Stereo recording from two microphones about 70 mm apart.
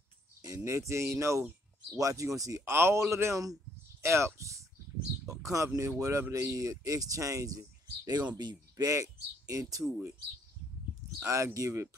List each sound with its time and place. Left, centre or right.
0.7 s speech: right
2.6 s a man's voice: right
8.4 s speech: right
8.8 s speech: right
11.1 s speech: right